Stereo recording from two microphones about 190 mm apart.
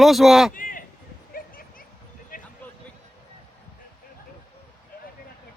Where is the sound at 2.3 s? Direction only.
45° left (ahead or behind).